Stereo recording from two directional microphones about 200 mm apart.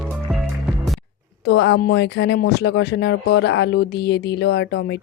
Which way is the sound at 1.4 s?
60° left (ahead or behind).